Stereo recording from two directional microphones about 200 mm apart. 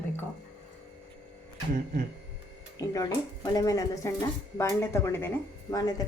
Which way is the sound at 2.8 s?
15° left (ahead or behind).